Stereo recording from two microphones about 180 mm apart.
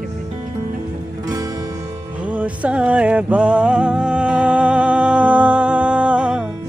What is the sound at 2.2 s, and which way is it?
Music, 10° right (ahead or behind).